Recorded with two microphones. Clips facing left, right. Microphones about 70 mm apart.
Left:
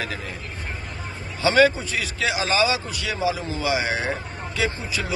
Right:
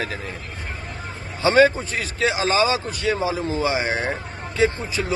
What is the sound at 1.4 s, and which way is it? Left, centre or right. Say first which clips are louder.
Speech: right 2 dB; right.